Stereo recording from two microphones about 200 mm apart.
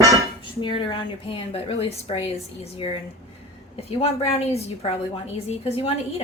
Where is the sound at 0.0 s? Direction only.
15° right (ahead or behind).